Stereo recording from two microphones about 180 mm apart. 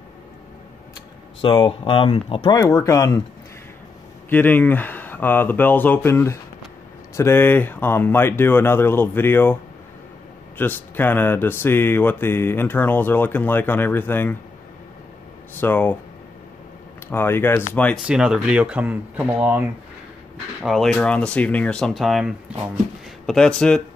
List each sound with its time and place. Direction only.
1.4 s speech: 30° left (ahead or behind)
4.3 s speech: 10° left (ahead or behind)
10.6 s speech: 10° left (ahead or behind)
15.5 s speech: 10° left (ahead or behind)
17.1 s speech: 10° left (ahead or behind)
17.9 s speech: 5° right (ahead or behind)
20.6 s speech: centre (ahead or behind)
23.2 s speech: 5° left (ahead or behind)